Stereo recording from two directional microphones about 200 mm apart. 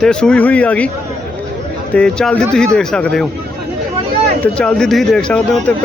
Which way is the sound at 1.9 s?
5° left (ahead or behind).